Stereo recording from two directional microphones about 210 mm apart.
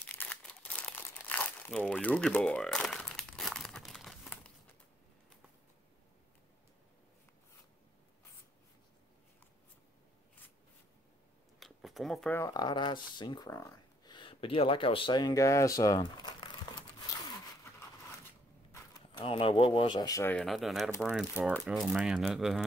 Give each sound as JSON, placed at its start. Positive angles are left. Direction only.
{"t": 0.0, "sound": "crumpling", "side_deg": 10}
{"t": 11.6, "sound": "a sound", "side_deg": 0}
{"t": 12.4, "sound": "speech", "side_deg": 20}
{"t": 18.7, "sound": "speech", "side_deg": 20}